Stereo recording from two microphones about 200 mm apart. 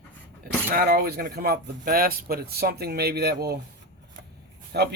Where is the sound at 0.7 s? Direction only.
50° right (ahead or behind).